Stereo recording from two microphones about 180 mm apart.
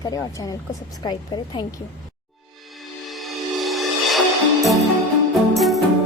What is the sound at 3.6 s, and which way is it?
Music, centre (ahead or behind).